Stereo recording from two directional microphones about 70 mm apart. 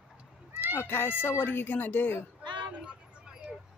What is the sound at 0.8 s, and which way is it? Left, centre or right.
Speech, left.